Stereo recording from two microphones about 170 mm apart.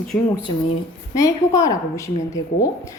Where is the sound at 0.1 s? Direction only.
10° left (ahead or behind).